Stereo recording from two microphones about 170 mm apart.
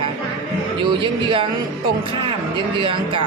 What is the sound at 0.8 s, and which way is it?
Speech, 30° right (ahead or behind).